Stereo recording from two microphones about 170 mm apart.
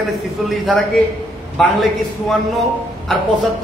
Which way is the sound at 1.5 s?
Centre (ahead or behind).